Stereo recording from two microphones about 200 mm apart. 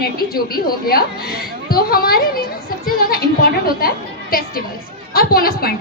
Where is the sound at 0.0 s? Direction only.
50° left (ahead or behind).